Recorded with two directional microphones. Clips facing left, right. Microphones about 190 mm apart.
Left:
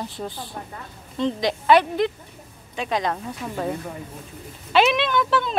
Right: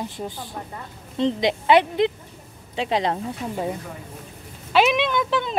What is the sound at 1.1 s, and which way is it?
Speech, 25° right (ahead or behind).